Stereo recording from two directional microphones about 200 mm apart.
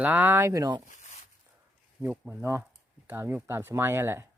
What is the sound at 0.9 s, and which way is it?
Zipper, 35° left (ahead or behind).